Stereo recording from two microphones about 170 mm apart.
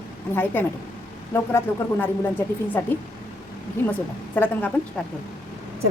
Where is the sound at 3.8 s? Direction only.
15° left (ahead or behind).